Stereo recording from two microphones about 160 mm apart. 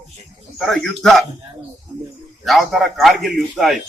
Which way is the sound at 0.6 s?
5° left (ahead or behind).